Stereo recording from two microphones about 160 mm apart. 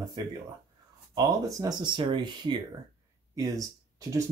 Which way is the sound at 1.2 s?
25° right (ahead or behind).